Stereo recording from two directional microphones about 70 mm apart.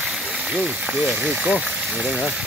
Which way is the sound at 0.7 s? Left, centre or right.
Centre.